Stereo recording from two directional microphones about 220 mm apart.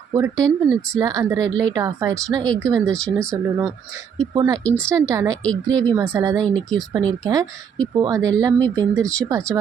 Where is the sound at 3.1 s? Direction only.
15° right (ahead or behind).